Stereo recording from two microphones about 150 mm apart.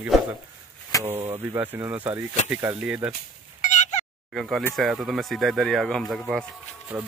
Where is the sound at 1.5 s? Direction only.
15° right (ahead or behind).